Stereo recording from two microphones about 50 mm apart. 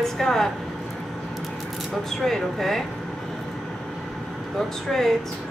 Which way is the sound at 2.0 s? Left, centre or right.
Centre.